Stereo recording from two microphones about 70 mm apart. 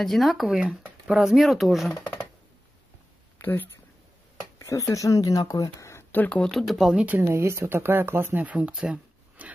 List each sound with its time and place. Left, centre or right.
0.0 s speech: centre
0.5 s speech: centre
3.3 s a sound: left
4.6 s speech: left
6.1 s speech: left
6.5 s speech: centre
7.2 s speech: right
8.5 s speech: centre